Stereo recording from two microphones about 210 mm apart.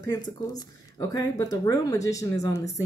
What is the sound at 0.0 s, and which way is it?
Speech, 15° left (ahead or behind).